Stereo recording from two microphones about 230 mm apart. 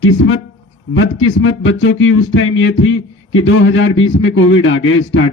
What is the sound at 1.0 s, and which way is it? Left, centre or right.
Speech, left.